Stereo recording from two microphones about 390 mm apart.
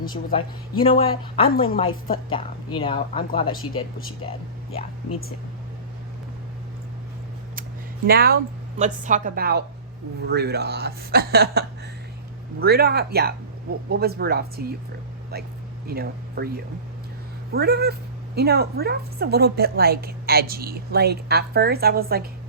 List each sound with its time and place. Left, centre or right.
0.3 s speech: centre
8.0 s a woman's voice: right
15.9 s speech: right
17.5 s a woman's voice: right